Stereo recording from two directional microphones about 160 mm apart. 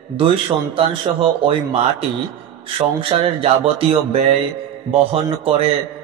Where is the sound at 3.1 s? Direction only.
40° right (ahead or behind).